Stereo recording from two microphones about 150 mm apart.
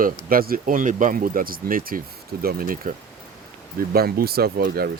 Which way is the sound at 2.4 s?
85° right.